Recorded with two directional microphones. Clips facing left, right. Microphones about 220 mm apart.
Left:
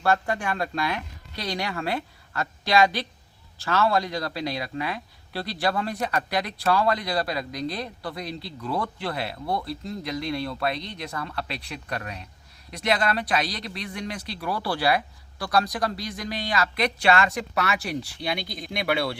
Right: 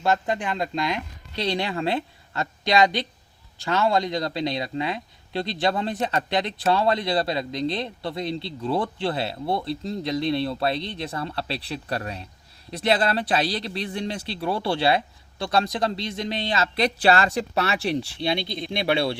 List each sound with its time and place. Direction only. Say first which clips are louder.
0.0 s speech: right 1 dB; 20° right (ahead or behind)